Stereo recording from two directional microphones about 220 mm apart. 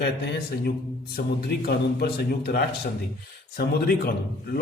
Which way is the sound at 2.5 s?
45° left (ahead or behind).